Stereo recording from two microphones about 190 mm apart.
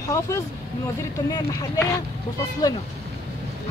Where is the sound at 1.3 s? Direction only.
15° left (ahead or behind).